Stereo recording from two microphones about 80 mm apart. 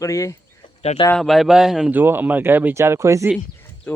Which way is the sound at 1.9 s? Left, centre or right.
Right.